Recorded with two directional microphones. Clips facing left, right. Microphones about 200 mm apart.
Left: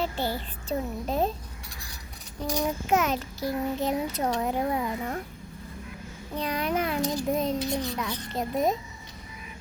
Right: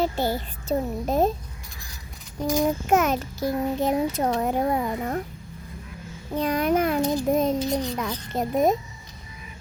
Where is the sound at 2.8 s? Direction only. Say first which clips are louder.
Right 4 dB; 50° right (ahead or behind).